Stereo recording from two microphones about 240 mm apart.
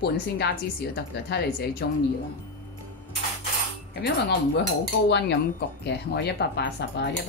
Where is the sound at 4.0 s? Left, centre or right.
Left.